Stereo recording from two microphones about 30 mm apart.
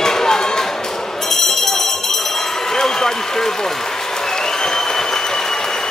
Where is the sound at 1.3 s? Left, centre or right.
Centre.